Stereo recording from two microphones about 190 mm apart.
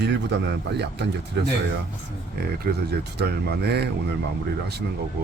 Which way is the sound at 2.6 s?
55° right (ahead or behind).